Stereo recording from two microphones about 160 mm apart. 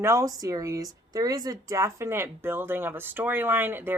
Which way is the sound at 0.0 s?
20° right (ahead or behind).